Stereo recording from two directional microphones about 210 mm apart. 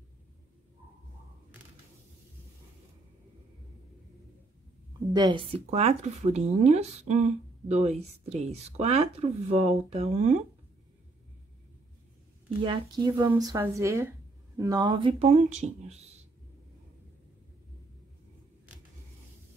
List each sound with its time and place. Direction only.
5.1 s speech: 20° right (ahead or behind)
12.6 s speech: 20° right (ahead or behind)